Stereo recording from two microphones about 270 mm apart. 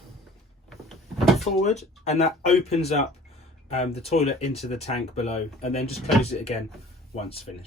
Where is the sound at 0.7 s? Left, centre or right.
Centre.